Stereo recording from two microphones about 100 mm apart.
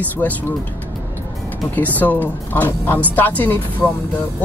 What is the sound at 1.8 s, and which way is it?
Speech, 15° left (ahead or behind).